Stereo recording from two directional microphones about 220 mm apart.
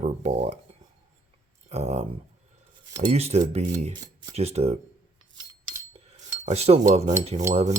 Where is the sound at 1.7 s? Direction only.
30° right (ahead or behind).